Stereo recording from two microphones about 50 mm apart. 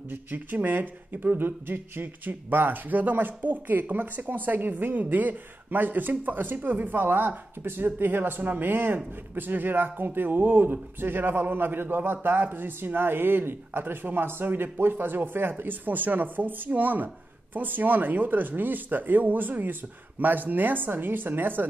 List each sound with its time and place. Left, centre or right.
0.1 s speech: right